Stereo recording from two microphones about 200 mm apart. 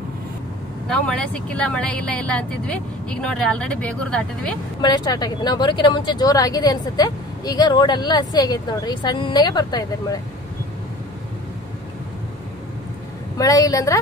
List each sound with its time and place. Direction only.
0.8 s speech: 5° left (ahead or behind)
4.8 s speech: 20° left (ahead or behind)
13.4 s a woman's voice: 15° left (ahead or behind)